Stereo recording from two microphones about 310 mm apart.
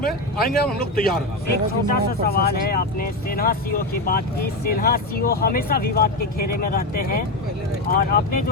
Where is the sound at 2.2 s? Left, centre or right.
Left.